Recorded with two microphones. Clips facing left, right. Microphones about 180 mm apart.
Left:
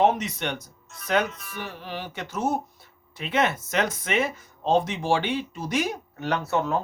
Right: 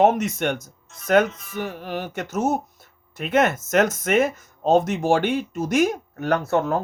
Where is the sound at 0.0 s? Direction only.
45° right (ahead or behind).